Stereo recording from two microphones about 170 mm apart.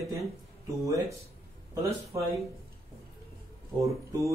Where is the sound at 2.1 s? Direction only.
15° right (ahead or behind).